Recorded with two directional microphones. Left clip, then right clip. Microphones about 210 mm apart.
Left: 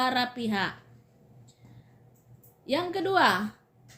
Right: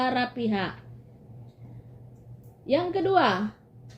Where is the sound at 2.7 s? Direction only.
25° left (ahead or behind).